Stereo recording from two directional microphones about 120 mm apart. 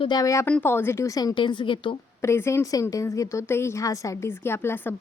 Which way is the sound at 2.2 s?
20° left (ahead or behind).